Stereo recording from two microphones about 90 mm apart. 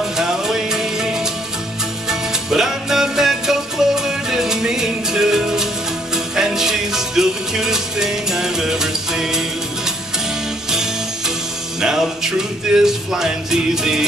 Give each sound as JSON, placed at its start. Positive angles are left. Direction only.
{"t": 0.0, "sound": "music", "side_deg": -5}